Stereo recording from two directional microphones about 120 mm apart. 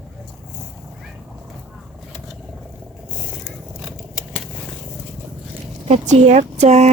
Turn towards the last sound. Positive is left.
turn(degrees=-70)  # may be behind; listen again after turning